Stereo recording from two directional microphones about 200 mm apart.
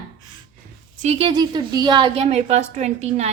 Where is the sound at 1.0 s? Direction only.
30° right (ahead or behind).